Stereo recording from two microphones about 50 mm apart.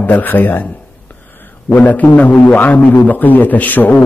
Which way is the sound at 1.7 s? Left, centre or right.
Left.